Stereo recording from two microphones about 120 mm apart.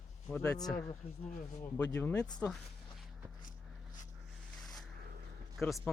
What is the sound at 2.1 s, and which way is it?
Speech, 35° left (ahead or behind).